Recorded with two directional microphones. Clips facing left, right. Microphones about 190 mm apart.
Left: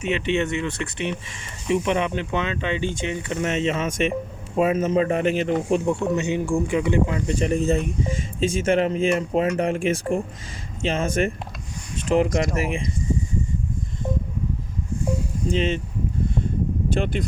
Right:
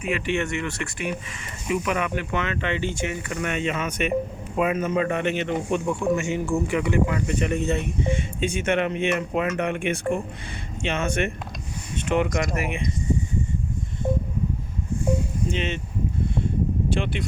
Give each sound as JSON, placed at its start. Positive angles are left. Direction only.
{"t": 0.0, "sound": "speech", "side_deg": 20}
{"t": 5.8, "sound": "speech", "side_deg": 25}
{"t": 15.4, "sound": "speech", "side_deg": 35}
{"t": 16.9, "sound": "speech", "side_deg": 40}